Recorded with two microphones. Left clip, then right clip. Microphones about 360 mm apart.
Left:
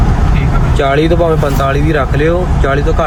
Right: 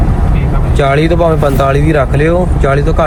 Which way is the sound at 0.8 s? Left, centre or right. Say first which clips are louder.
Right 1 dB; right.